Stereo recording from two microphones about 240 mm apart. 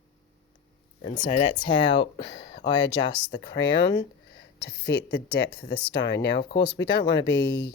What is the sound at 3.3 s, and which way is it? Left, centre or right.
Speech, left.